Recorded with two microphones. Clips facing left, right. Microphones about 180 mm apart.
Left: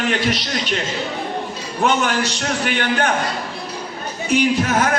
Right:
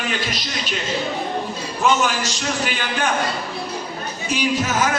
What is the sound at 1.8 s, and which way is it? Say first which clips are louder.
A man's voice: left 1 dB; 65° left (ahead or behind).